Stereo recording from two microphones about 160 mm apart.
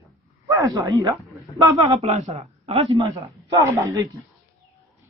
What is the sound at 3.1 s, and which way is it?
Speech, 20° right (ahead or behind).